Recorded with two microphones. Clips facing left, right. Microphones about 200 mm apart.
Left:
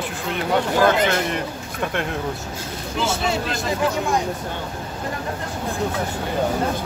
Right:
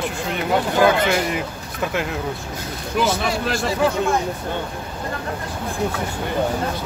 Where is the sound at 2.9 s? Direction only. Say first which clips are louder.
Right 2 dB; 25° left (ahead or behind).